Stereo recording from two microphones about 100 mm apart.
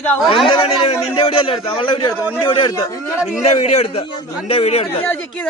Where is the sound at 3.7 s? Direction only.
85° left.